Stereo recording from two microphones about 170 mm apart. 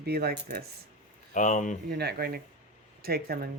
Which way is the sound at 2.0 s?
65° right (ahead or behind).